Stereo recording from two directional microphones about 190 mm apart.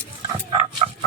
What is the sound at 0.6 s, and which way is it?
Dog, 35° right (ahead or behind).